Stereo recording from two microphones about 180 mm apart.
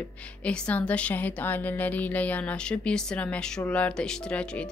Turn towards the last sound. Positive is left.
turn(degrees=5)  # may be behind; listen again after turning